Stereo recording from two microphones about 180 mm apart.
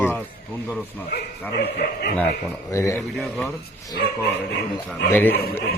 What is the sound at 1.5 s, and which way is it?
Speech, 65° left (ahead or behind).